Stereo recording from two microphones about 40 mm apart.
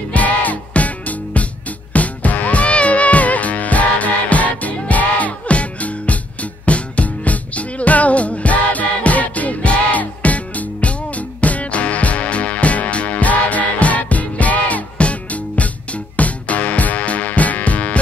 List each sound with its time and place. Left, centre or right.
0.1 s music: left